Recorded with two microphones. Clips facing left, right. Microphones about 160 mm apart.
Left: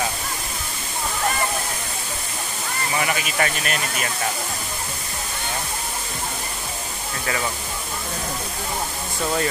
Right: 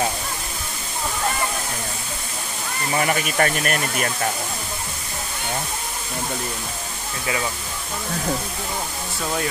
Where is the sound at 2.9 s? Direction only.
45° right (ahead or behind).